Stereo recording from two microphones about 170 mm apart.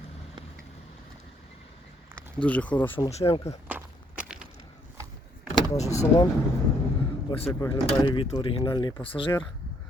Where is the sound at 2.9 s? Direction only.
35° left (ahead or behind).